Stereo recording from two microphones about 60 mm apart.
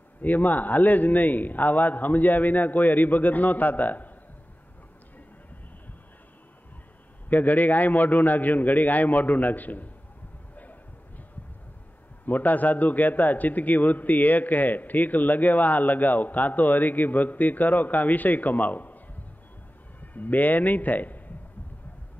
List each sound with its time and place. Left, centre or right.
0.2 s a man's voice: left
7.2 s a man's voice: left
10.5 s a sound: left
12.3 s a man's voice: left
20.0 s a man's voice: left